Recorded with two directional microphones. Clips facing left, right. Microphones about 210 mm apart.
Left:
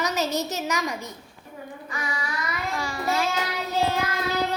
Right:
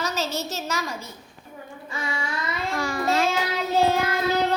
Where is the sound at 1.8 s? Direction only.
30° right (ahead or behind).